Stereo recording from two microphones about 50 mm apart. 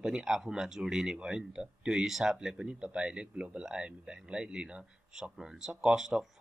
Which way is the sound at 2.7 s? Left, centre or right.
Right.